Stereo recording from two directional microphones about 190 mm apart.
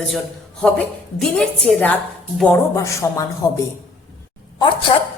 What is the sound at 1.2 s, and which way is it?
Speech, 5° left (ahead or behind).